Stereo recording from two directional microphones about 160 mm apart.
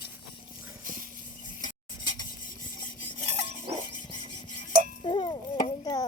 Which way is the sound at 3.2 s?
40° right (ahead or behind).